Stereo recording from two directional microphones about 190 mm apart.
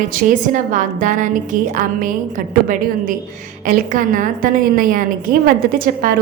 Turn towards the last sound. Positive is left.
turn(degrees=-50)  # may be behind; listen again after turning